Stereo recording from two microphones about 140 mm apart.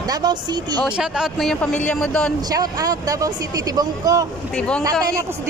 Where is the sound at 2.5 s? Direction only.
25° right (ahead or behind).